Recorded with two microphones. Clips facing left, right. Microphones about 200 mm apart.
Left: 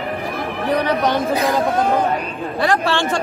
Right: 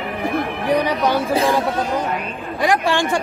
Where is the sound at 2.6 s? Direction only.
15° right (ahead or behind).